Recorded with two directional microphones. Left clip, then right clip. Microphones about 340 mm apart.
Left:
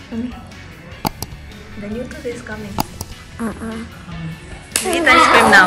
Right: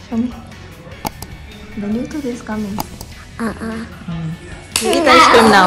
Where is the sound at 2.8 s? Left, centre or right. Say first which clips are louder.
Left 3 dB; centre.